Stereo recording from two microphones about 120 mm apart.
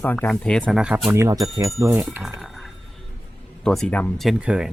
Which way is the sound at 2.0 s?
5° right (ahead or behind).